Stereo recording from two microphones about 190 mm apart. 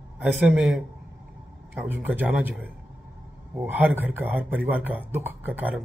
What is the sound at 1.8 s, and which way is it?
A man's voice, 10° right (ahead or behind).